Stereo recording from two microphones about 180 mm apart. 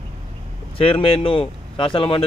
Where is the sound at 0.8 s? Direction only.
30° left (ahead or behind).